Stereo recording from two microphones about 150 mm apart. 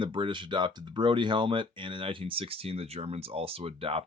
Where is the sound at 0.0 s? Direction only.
35° right (ahead or behind).